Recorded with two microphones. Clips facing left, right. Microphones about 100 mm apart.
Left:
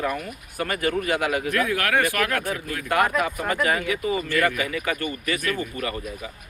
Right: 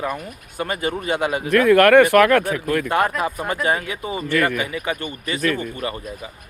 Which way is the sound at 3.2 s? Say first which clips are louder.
Right 1 dB; 30° right (ahead or behind).